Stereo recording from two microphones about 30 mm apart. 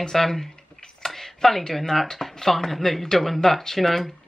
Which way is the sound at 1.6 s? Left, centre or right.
Centre.